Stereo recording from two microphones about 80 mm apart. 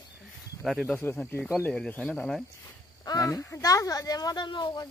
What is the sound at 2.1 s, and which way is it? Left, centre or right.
Speech, centre.